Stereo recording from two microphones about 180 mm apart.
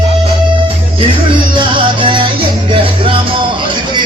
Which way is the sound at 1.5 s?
30° right (ahead or behind).